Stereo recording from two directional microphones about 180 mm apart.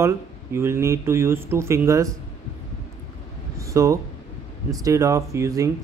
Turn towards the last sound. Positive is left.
turn(degrees=-15)  # may be behind; listen again after turning